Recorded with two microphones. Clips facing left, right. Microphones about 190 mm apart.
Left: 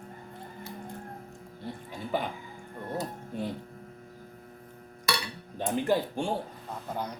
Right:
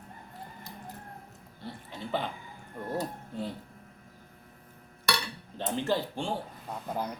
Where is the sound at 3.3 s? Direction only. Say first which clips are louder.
Left 2 dB; 20° left (ahead or behind).